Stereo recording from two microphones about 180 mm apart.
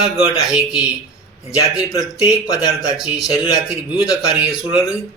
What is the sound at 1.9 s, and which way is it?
Speech, 20° left (ahead or behind).